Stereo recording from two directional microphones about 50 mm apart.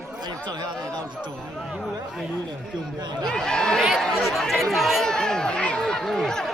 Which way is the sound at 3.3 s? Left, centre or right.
Centre.